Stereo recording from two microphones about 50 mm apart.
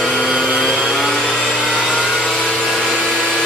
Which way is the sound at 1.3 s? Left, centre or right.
Left.